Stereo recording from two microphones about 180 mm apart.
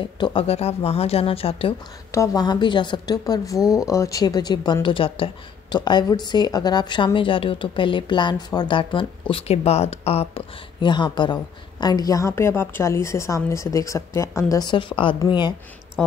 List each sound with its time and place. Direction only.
0.2 s speech: 30° left (ahead or behind)
2.1 s speech: 20° left (ahead or behind)
3.5 s speech: centre (ahead or behind)
3.8 s speech: 20° left (ahead or behind)
16.0 s speech: 10° left (ahead or behind)